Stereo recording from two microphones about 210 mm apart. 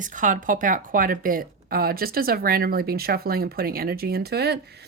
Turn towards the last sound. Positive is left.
turn(degrees=-50)  # may be behind; listen again after turning